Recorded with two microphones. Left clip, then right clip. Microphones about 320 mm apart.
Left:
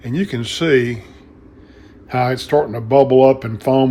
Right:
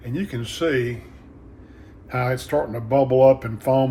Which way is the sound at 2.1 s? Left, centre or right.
Left.